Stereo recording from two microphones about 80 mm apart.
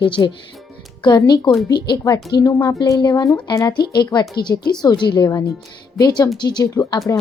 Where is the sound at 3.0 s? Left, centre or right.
Left.